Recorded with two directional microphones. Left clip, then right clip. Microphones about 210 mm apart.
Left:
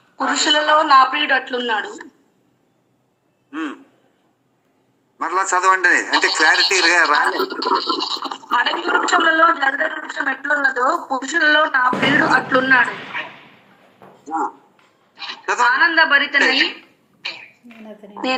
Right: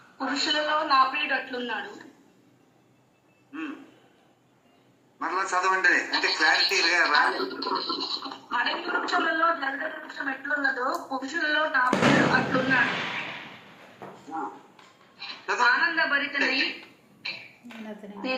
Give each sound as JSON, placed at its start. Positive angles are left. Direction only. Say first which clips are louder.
{"t": 0.2, "sound": "a man's voice", "louder": "left 10 dB", "side_deg": 45}
{"t": 5.2, "sound": "a man's voice", "louder": "left 9 dB", "side_deg": 45}
{"t": 15.1, "sound": "a woman's voice", "louder": "left 8 dB", "side_deg": 45}
{"t": 17.2, "sound": "a sound", "louder": "left 6 dB", "side_deg": 45}
{"t": 18.0, "sound": "a woman's voice", "louder": "left 7 dB", "side_deg": 30}